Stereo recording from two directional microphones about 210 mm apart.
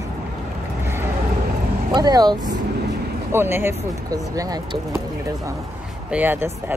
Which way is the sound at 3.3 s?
10° right (ahead or behind).